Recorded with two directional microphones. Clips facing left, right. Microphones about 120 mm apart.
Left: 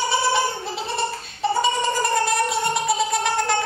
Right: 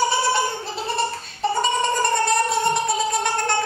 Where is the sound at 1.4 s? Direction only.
Centre (ahead or behind).